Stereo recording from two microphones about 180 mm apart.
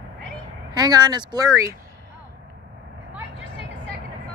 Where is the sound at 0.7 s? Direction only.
20° right (ahead or behind).